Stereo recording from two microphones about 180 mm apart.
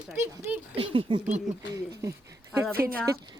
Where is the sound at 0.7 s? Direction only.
30° right (ahead or behind).